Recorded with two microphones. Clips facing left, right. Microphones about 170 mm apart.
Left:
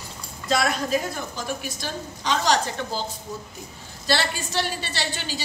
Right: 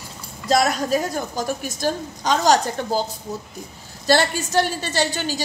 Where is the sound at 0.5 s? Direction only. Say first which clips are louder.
Right 4 dB; 40° right (ahead or behind).